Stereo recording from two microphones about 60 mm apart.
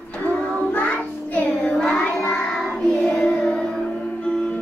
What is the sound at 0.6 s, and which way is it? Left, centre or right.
Child singing, left.